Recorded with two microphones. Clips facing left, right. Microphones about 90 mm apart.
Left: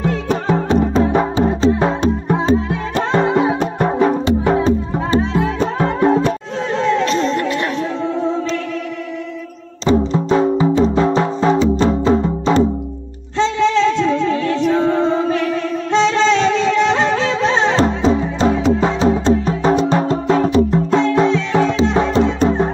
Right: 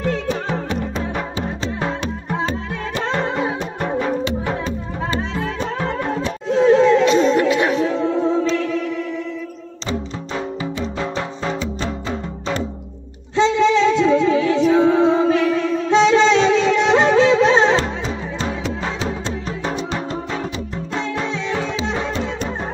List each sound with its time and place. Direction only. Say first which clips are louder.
0.5 s music: left 8 dB; 35° left (ahead or behind)
2.5 s music: left 8 dB; 10° left (ahead or behind)
5.2 s music: left 7 dB; 5° left (ahead or behind)
5.8 s music: left 10 dB; 35° left (ahead or behind)
6.5 s music: right 9 dB; 5° right (ahead or behind)
9.8 s music: left 12 dB; 35° left (ahead or behind)
13.4 s music: even; 10° right (ahead or behind)
17.7 s music: left 7 dB; 35° left (ahead or behind); by 21.4 s 55° left (ahead or behind)
21.9 s music: left 8 dB; 40° left (ahead or behind)